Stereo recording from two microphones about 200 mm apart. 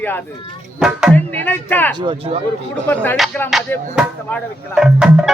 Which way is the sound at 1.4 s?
10° left (ahead or behind).